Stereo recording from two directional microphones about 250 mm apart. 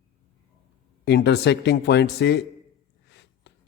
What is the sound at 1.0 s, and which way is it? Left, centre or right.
A man's voice, left.